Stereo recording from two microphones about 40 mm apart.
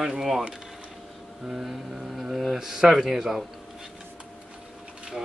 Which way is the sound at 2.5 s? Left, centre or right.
Centre.